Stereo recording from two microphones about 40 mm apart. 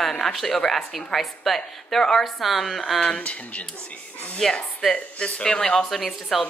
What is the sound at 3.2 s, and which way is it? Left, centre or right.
Speech, left.